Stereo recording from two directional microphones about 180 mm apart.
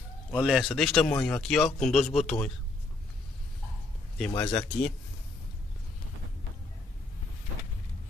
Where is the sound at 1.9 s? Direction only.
35° left (ahead or behind).